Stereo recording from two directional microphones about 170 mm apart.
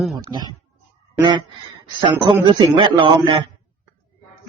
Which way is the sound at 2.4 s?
30° right (ahead or behind).